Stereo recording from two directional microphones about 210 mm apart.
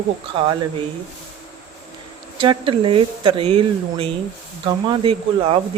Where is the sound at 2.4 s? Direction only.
25° right (ahead or behind).